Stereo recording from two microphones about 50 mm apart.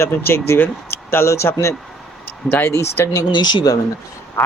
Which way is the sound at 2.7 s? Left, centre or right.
Left.